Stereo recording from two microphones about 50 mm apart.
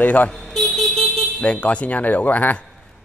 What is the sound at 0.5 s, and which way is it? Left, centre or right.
Vehicle, centre.